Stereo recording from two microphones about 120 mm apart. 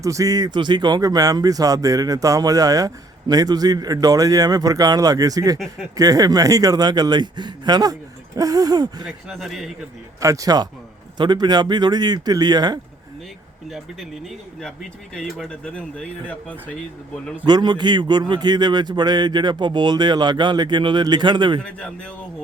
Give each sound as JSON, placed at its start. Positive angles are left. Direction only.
{"t": 0.0, "sound": "speech", "side_deg": -30}
{"t": 9.0, "sound": "speech", "side_deg": 0}
{"t": 10.2, "sound": "speech", "side_deg": -30}
{"t": 13.7, "sound": "speech", "side_deg": 0}
{"t": 17.4, "sound": "speech", "side_deg": -35}